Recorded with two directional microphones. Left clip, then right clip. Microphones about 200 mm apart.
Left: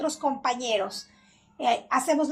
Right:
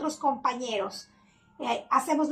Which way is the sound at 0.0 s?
15° left (ahead or behind).